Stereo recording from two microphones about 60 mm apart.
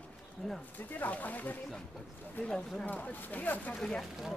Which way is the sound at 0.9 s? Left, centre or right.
Left.